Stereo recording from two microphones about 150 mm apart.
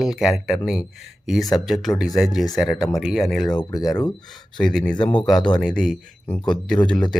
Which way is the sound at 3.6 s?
25° left (ahead or behind).